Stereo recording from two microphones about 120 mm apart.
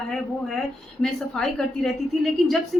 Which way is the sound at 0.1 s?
5° left (ahead or behind).